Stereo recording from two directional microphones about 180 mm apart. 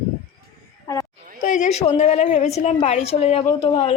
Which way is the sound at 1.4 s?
40° left (ahead or behind).